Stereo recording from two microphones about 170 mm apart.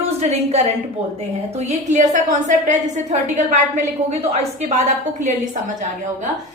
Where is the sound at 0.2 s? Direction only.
40° right (ahead or behind).